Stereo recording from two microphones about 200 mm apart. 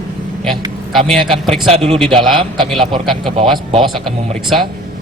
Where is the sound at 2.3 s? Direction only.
25° right (ahead or behind).